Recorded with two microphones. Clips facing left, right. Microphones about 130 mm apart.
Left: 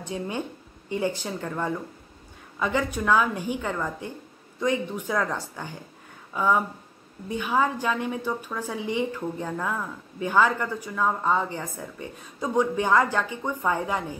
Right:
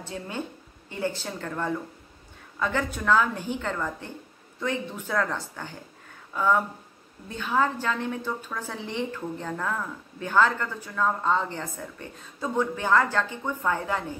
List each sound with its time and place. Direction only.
0.0 s a woman's voice: 15° left (ahead or behind)